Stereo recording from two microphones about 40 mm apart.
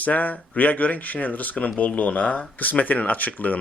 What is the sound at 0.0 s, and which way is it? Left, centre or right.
Speech, left.